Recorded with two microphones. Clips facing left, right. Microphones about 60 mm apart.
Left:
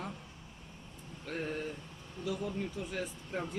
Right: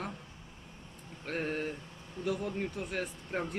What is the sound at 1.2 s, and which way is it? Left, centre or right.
Speech, right.